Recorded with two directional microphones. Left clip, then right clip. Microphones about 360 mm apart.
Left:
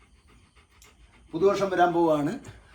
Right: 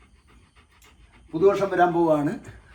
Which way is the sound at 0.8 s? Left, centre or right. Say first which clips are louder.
Right 1 dB; centre.